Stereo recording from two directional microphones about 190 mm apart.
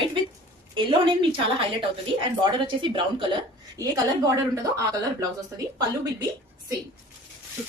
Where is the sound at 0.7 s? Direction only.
25° right (ahead or behind).